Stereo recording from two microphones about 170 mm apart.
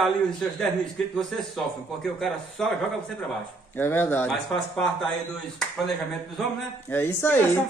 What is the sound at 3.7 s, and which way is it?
Speech, 15° left (ahead or behind).